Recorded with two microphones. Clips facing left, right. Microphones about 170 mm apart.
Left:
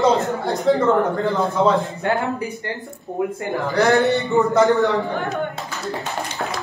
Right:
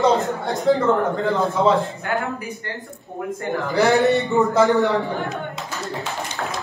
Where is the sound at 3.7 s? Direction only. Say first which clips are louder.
Even; centre (ahead or behind).